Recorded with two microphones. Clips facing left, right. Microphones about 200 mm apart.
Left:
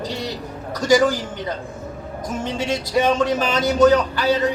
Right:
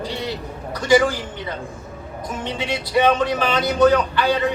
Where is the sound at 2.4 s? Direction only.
45° left (ahead or behind).